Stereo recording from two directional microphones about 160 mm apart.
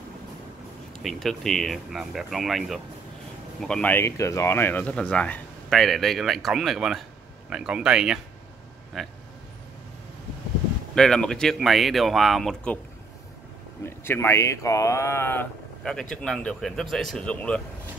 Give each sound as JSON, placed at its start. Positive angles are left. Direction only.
{"t": 1.0, "sound": "speech", "side_deg": 0}
{"t": 11.0, "sound": "speech", "side_deg": 5}
{"t": 13.8, "sound": "speech", "side_deg": 15}
{"t": 15.8, "sound": "speech", "side_deg": 5}